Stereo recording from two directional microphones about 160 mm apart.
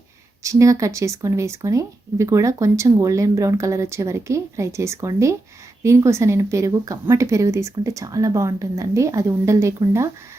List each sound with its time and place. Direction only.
0.4 s speech: 20° right (ahead or behind)